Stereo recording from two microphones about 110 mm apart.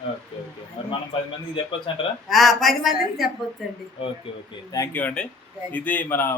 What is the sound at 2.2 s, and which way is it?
A woman's voice, centre (ahead or behind).